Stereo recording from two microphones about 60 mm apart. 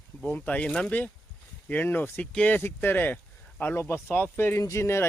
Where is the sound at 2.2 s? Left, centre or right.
Centre.